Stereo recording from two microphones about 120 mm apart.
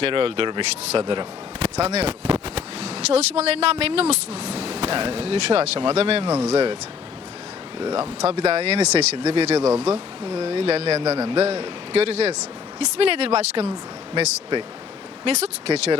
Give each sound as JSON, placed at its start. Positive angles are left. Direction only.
{"t": 0.0, "sound": "a man's voice", "side_deg": -50}
{"t": 1.6, "sound": "speech", "side_deg": -65}
{"t": 8.2, "sound": "speech", "side_deg": -60}
{"t": 9.6, "sound": "speech", "side_deg": -20}
{"t": 9.8, "sound": "speech", "side_deg": -55}
{"t": 15.2, "sound": "speech", "side_deg": -55}